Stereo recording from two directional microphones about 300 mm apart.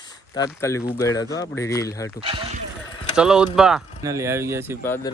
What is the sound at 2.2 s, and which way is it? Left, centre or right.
Speech, centre.